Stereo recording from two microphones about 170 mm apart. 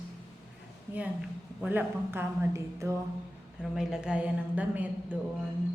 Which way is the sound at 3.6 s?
5° right (ahead or behind).